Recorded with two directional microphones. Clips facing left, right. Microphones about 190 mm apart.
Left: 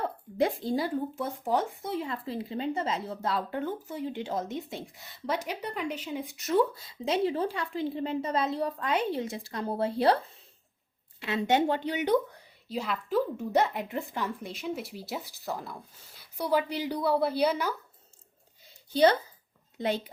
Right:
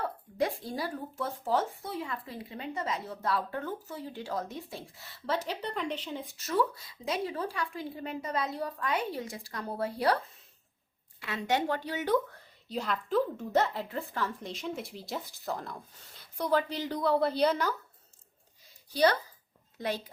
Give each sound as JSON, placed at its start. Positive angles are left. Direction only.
{"t": 0.0, "sound": "speech", "side_deg": 25}
{"t": 11.2, "sound": "speech", "side_deg": 25}
{"t": 12.6, "sound": "speech", "side_deg": 5}
{"t": 14.5, "sound": "speech", "side_deg": 5}
{"t": 18.7, "sound": "a sound", "side_deg": 25}